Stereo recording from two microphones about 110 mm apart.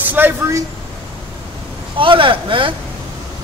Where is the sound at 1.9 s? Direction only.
50° right (ahead or behind).